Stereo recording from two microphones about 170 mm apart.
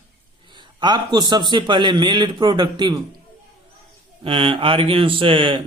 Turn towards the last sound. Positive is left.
turn(degrees=-30)  # may be behind; listen again after turning